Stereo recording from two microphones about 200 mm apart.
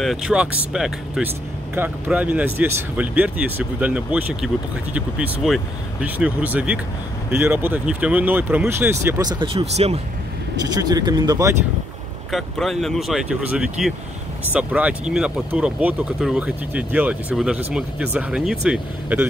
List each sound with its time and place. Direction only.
0.0 s speech: centre (ahead or behind); by 9.9 s 30° right (ahead or behind)
10.7 s speech: 20° right (ahead or behind)
12.3 s speech: centre (ahead or behind)